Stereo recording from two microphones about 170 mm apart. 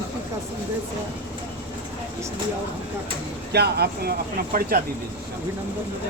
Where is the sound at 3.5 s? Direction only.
70° right (ahead or behind).